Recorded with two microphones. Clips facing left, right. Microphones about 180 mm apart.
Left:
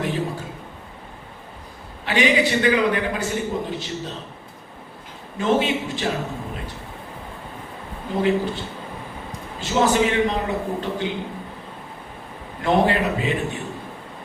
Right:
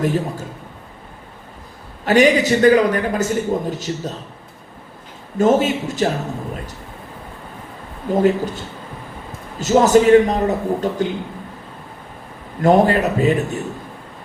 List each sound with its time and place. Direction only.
0.0 s a man's voice: 45° right (ahead or behind)
2.0 s a man's voice: 45° right (ahead or behind)
5.4 s a man's voice: 45° right (ahead or behind)
8.1 s a man's voice: 45° right (ahead or behind)
12.6 s a man's voice: 45° right (ahead or behind)